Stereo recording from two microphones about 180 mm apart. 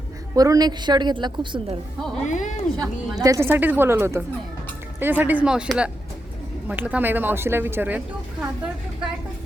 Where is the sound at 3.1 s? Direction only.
20° right (ahead or behind).